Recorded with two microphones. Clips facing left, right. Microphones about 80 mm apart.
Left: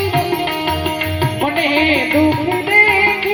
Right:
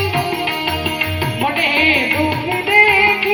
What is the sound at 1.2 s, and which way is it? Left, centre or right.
Music, left.